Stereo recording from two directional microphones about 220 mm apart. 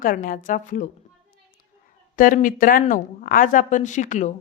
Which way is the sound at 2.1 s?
35° left (ahead or behind).